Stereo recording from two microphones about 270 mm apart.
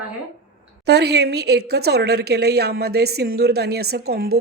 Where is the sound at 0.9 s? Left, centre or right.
Right.